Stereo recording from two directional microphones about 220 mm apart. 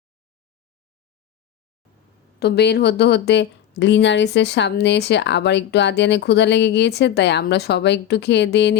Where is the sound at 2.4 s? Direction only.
50° left (ahead or behind).